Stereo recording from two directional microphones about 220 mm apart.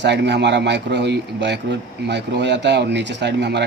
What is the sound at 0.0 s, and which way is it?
Speech, 50° right (ahead or behind).